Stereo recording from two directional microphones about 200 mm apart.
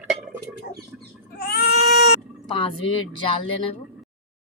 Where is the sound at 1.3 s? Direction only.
50° left (ahead or behind).